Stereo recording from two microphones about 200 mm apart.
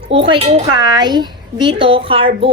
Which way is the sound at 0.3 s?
30° right (ahead or behind).